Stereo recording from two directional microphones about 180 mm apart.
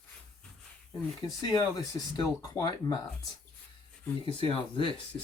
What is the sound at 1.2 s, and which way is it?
Speech, 20° left (ahead or behind).